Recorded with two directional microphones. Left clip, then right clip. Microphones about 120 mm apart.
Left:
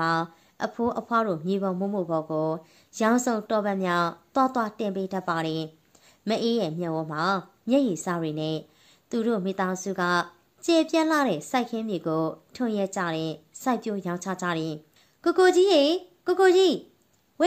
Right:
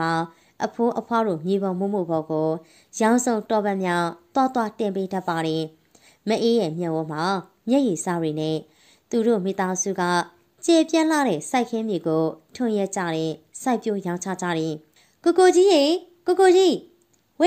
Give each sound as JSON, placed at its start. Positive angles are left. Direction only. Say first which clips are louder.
{"t": 0.0, "sound": "a woman's voice", "louder": "right 1 dB", "side_deg": -30}